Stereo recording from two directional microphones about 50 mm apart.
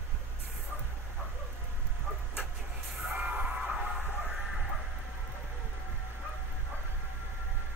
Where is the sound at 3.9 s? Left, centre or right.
Centre.